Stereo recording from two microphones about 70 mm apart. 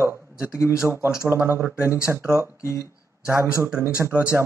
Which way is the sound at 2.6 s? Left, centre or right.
Left.